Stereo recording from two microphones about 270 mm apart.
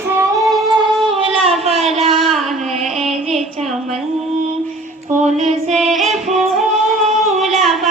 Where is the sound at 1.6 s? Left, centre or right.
Centre.